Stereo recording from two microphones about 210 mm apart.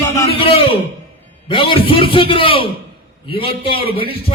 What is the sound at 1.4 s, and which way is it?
A man's voice, 25° left (ahead or behind).